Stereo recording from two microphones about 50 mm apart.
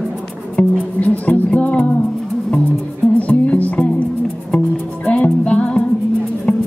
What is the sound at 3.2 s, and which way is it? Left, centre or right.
Music, left.